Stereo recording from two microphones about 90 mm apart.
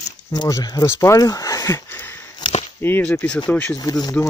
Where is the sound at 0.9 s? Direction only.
35° left (ahead or behind).